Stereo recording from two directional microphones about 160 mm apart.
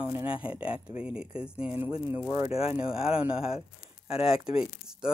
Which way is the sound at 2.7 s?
5° right (ahead or behind).